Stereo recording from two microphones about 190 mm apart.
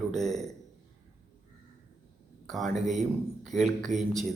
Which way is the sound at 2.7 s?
40° right (ahead or behind).